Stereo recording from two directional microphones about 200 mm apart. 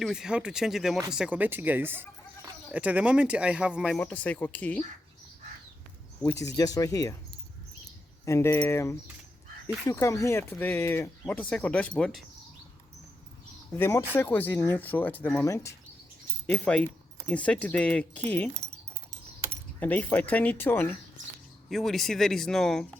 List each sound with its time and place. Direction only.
0.0 s speech: 5° right (ahead or behind)
6.4 s speech: 15° left (ahead or behind)
13.7 s speech: 10° left (ahead or behind)
19.8 s speech: 10° left (ahead or behind)